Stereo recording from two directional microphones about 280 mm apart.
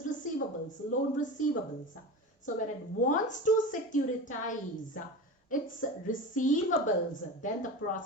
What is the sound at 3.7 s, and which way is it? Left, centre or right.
A woman's voice, left.